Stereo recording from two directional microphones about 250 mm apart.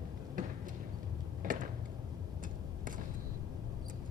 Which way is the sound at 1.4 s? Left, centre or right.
Right.